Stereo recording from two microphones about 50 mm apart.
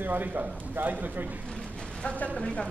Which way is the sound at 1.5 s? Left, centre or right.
Left.